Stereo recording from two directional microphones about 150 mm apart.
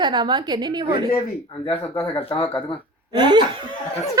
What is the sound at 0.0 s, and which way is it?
A woman's voice, 30° right (ahead or behind).